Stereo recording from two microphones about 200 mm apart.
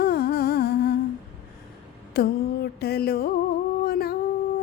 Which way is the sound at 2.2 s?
50° left (ahead or behind).